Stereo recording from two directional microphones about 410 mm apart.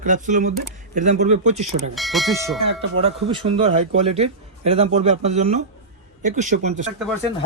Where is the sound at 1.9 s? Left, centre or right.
Centre.